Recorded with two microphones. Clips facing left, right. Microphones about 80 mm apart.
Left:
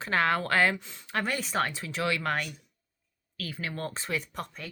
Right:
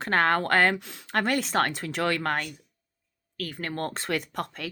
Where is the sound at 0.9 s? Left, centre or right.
Right.